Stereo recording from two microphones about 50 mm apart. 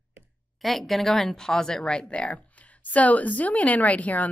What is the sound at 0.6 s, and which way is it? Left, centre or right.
A woman's voice, centre.